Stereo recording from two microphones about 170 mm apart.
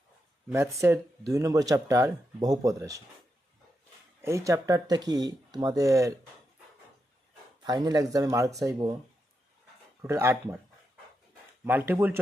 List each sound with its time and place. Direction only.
0.5 s speech: 15° right (ahead or behind)
4.2 s speech: 15° right (ahead or behind)
7.6 s speech: 25° right (ahead or behind)
10.0 s speech: 15° right (ahead or behind)
11.6 s speech: 10° right (ahead or behind)